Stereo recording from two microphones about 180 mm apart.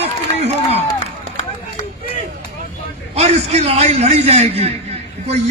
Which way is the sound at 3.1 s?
35° right (ahead or behind).